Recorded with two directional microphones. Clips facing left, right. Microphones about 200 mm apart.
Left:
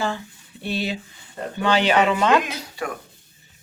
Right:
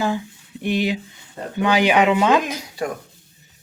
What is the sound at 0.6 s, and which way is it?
Speech, 15° right (ahead or behind).